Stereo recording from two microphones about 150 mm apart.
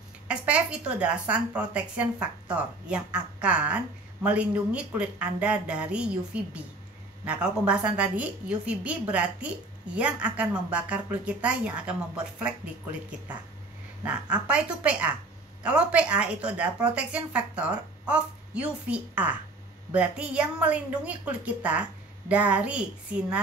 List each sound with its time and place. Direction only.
0.3 s a woman's voice: 10° right (ahead or behind)
14.0 s a woman's voice: 10° right (ahead or behind)